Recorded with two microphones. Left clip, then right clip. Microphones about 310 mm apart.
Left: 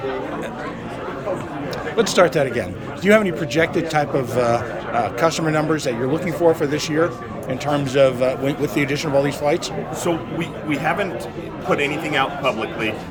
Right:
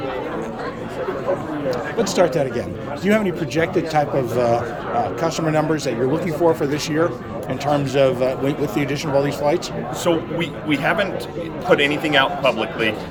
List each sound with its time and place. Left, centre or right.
2.0 s a man's voice: centre
10.7 s a man's voice: centre